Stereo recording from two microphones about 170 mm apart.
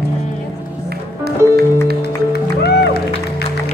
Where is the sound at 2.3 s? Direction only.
70° left (ahead or behind).